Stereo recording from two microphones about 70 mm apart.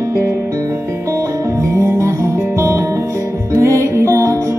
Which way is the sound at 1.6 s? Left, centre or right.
Right.